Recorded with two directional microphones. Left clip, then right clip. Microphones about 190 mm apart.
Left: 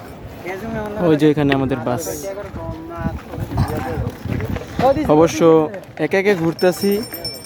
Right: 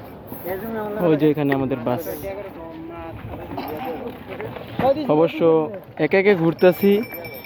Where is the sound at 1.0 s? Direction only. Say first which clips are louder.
Left 3 dB; 15° left (ahead or behind).